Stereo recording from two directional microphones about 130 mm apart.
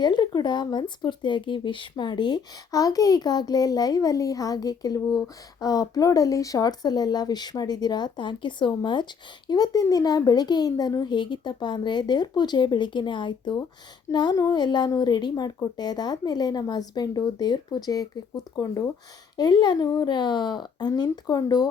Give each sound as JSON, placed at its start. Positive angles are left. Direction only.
{"t": 0.0, "sound": "speech", "side_deg": 35}